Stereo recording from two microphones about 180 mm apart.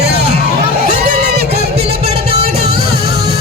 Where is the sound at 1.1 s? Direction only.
60° right (ahead or behind).